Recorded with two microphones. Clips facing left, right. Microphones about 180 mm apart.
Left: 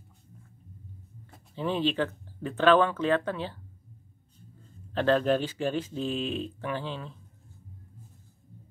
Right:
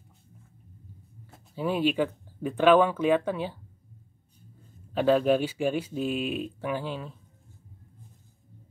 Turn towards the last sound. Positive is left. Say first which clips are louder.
# right 2 dB
turn(degrees=-10)  # may be behind; listen again after turning